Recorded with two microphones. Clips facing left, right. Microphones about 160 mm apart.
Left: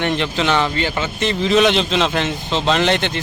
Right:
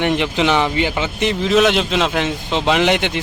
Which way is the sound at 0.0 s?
15° right (ahead or behind).